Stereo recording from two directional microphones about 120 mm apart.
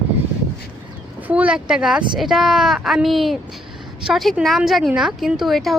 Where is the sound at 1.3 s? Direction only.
10° right (ahead or behind).